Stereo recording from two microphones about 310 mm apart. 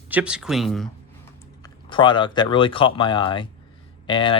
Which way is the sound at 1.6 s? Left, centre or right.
Centre.